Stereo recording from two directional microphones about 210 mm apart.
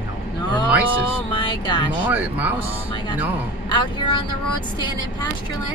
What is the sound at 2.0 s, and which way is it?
Speech, 10° right (ahead or behind).